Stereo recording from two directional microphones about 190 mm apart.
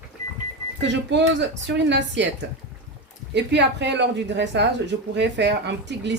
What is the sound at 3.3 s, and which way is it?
Speech, 65° right (ahead or behind).